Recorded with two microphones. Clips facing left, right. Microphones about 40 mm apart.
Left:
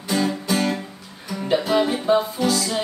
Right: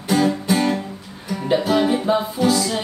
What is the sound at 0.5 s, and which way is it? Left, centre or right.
Music, centre.